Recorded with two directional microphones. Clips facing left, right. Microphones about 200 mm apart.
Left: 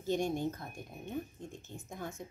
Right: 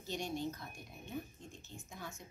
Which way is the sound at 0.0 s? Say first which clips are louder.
Left 7 dB; 50° left (ahead or behind).